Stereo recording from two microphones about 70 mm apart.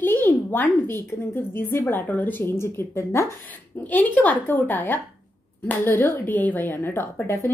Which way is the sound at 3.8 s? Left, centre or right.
Left.